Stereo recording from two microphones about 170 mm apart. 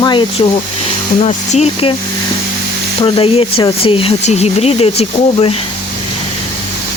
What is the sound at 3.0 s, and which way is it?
Speech, 30° left (ahead or behind).